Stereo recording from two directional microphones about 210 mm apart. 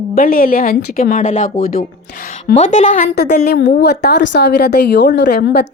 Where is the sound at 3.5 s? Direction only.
55° left (ahead or behind).